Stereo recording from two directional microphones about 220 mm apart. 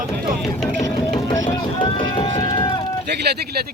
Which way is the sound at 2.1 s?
25° left (ahead or behind).